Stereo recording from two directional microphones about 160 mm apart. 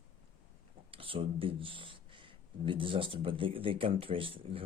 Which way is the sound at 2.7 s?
35° right (ahead or behind).